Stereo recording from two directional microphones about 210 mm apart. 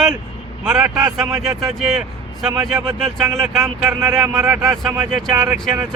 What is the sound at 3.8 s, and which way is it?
Speech, 10° right (ahead or behind).